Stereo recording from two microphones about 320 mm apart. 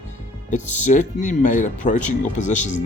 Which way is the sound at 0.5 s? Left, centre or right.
Left.